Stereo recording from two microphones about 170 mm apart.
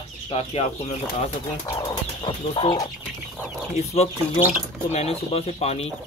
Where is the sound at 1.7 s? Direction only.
25° left (ahead or behind).